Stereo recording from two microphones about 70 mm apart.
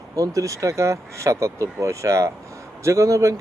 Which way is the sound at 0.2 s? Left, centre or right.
Right.